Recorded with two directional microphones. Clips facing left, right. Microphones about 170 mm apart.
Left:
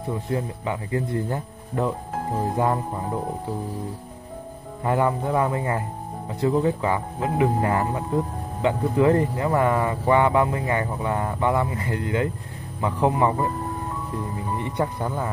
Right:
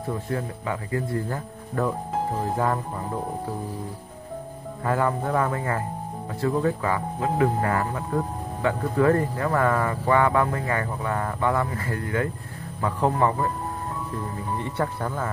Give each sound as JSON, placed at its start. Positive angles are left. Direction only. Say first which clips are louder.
{"t": 0.1, "sound": "speech", "louder": "left 2 dB", "side_deg": 20}
{"t": 4.8, "sound": "speech", "louder": "left 2 dB", "side_deg": 20}
{"t": 14.6, "sound": "speech", "louder": "left 2 dB", "side_deg": 15}